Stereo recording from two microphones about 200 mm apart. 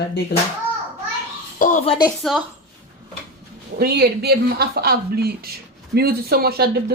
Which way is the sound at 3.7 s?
50° right (ahead or behind).